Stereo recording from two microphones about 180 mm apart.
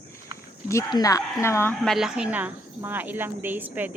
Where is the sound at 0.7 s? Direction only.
20° left (ahead or behind).